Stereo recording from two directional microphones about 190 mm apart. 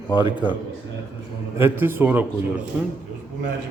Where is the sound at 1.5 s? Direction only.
10° right (ahead or behind).